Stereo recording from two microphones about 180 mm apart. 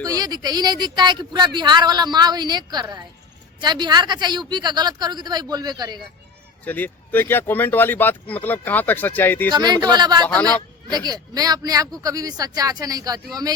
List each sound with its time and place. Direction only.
0.0 s speech: 20° right (ahead or behind)
6.7 s speech: 10° left (ahead or behind)
9.5 s speech: 25° right (ahead or behind)
10.2 s speech: 10° left (ahead or behind)
10.9 s speech: 20° right (ahead or behind)